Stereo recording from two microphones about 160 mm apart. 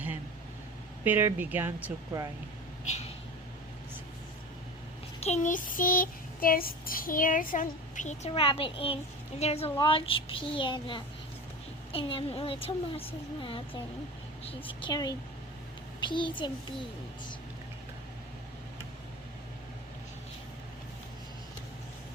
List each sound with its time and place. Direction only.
1.0 s speech: 10° right (ahead or behind)
5.2 s child singing: 45° left (ahead or behind)
8.3 s speech: 35° left (ahead or behind)
14.8 s a child's voice: 25° left (ahead or behind)